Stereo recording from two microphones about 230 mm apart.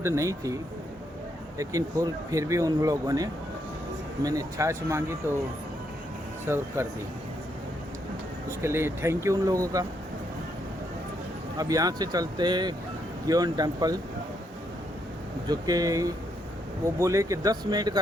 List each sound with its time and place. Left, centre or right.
0.0 s speech: centre
6.4 s speech: centre
8.4 s speech: centre
11.5 s speech: centre
15.4 s speech: centre